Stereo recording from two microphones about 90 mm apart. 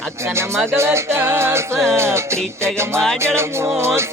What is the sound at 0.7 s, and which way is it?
Speech, 30° right (ahead or behind).